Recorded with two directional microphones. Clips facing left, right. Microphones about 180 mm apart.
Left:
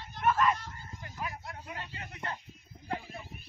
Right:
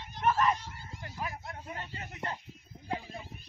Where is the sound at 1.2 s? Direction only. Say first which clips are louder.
Even; 40° right (ahead or behind).